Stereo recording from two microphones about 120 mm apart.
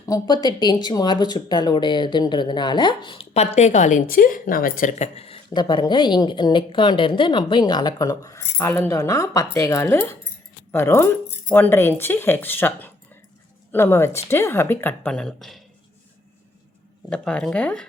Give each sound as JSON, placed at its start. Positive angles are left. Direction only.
{"t": 0.0, "sound": "speech", "side_deg": 30}
{"t": 4.9, "sound": "speech", "side_deg": 65}
{"t": 5.5, "sound": "speech", "side_deg": 35}
{"t": 15.1, "sound": "speech", "side_deg": 5}
{"t": 17.1, "sound": "speech", "side_deg": 10}